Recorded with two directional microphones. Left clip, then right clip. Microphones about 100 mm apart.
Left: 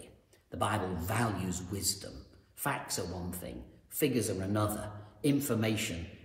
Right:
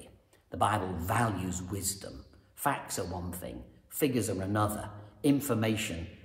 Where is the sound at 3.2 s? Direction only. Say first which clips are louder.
Right 2 dB; 15° right (ahead or behind).